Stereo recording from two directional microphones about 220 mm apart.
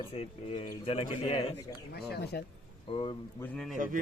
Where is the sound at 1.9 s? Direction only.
45° left (ahead or behind).